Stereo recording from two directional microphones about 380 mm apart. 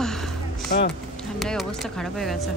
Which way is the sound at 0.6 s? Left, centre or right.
Left.